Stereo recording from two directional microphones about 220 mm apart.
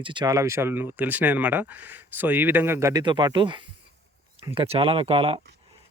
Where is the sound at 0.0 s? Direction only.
20° right (ahead or behind).